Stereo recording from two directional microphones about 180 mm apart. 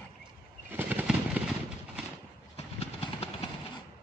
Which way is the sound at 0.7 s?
10° right (ahead or behind).